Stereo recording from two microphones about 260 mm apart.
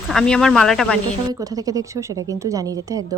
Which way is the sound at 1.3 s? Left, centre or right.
Centre.